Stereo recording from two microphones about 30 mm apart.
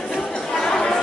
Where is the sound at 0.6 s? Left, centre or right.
Left.